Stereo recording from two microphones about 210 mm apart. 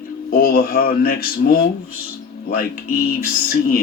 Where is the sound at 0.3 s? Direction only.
45° left (ahead or behind).